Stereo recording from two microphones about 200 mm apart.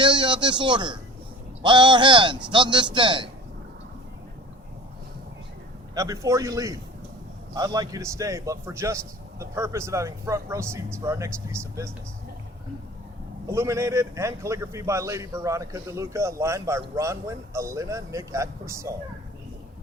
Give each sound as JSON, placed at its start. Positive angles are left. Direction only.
{"t": 0.0, "sound": "a man's voice", "side_deg": -25}
{"t": 5.9, "sound": "a man's voice", "side_deg": -15}
{"t": 13.5, "sound": "a man's voice", "side_deg": -15}